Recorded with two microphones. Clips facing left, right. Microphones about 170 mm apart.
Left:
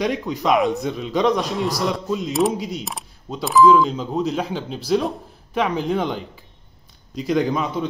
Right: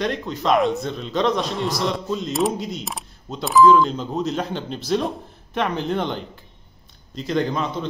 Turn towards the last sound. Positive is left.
turn(degrees=10)  # may be behind; listen again after turning